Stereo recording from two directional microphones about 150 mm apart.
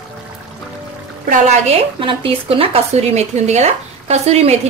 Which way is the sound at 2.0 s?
35° right (ahead or behind).